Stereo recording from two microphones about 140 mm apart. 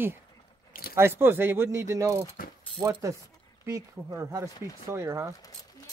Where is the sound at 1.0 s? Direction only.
15° right (ahead or behind).